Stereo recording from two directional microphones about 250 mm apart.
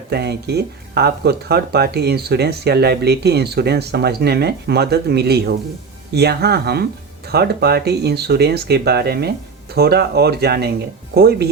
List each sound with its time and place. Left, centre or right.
0.1 s speech: right